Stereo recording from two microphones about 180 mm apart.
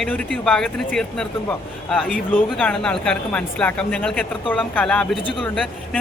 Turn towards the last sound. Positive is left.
turn(degrees=5)  # may be behind; listen again after turning